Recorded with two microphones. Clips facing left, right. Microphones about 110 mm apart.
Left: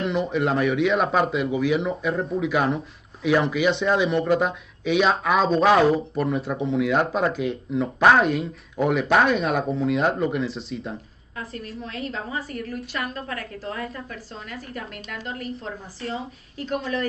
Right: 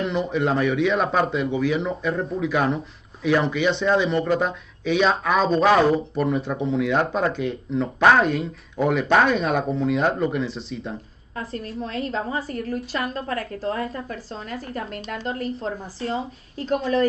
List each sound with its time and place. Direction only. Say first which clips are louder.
0.0 s speech: even; centre (ahead or behind)
11.3 s a woman's voice: right 4 dB; 30° right (ahead or behind)